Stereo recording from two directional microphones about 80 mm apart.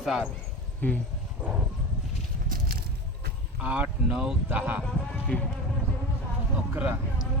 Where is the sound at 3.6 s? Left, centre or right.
Centre.